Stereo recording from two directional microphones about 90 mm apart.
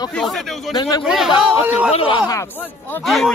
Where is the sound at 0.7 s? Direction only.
55° left (ahead or behind).